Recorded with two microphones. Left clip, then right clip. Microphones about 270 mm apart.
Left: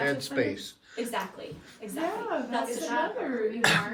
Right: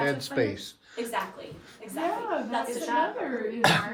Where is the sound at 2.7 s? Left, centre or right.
Right.